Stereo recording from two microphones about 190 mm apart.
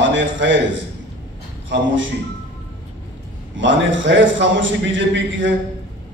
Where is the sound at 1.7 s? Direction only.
75° right (ahead or behind).